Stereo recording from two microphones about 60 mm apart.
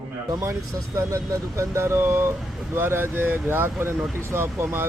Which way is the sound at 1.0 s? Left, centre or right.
Right.